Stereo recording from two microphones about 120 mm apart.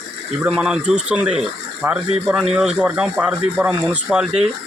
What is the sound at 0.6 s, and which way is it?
Speech, 10° right (ahead or behind).